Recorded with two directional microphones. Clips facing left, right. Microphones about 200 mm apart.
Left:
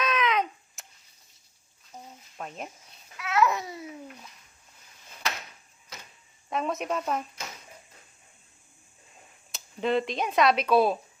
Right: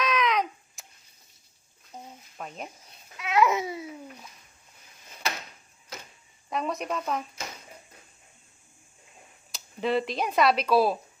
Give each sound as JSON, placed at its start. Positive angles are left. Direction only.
{"t": 0.0, "sound": "a sound", "side_deg": 0}
{"t": 1.9, "sound": "a sound", "side_deg": -10}
{"t": 2.4, "sound": "speech", "side_deg": 0}
{"t": 3.2, "sound": "babbling", "side_deg": -15}
{"t": 6.5, "sound": "speech", "side_deg": 0}
{"t": 9.5, "sound": "speech", "side_deg": 0}